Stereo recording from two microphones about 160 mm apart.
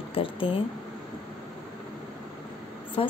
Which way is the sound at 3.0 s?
35° left (ahead or behind).